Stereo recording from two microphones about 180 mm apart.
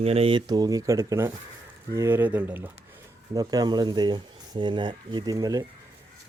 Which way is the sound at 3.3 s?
20° right (ahead or behind).